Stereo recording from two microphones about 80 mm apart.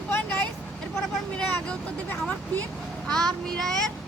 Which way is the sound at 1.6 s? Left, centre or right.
Centre.